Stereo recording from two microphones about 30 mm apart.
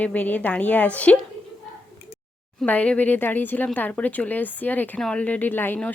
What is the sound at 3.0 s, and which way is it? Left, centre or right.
Speech, left.